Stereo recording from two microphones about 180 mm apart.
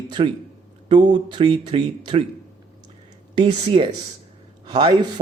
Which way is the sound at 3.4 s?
25° right (ahead or behind).